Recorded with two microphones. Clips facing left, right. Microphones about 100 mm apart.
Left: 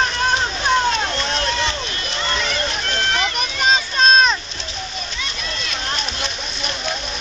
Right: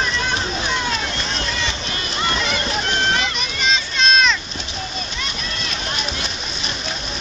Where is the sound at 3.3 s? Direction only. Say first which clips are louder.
Left 3 dB; 45° left (ahead or behind).